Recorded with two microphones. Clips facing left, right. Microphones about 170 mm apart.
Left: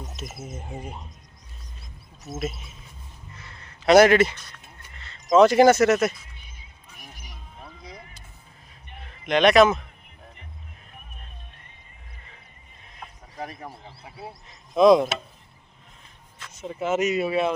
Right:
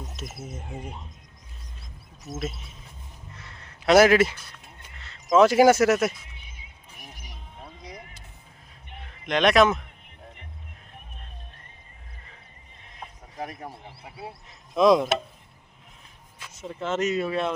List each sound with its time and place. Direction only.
0.2 s speech: centre (ahead or behind)
2.4 s speech: 5° left (ahead or behind)
3.3 s a sound: centre (ahead or behind)
7.3 s a sound: 20° right (ahead or behind)
9.2 s speech: centre (ahead or behind)
13.4 s speech: 5° right (ahead or behind)
16.6 s speech: 5° left (ahead or behind)